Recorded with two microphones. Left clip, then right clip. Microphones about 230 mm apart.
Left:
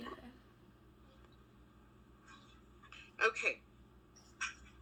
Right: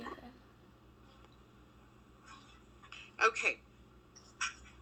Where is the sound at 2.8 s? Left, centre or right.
Right.